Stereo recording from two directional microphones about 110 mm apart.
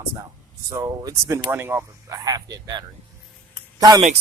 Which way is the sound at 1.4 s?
20° right (ahead or behind).